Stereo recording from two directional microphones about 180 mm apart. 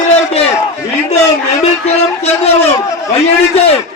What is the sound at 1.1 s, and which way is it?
A man's voice, 35° left (ahead or behind).